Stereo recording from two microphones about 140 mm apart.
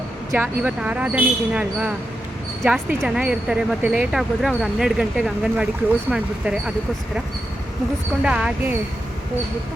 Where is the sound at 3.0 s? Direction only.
5° right (ahead or behind).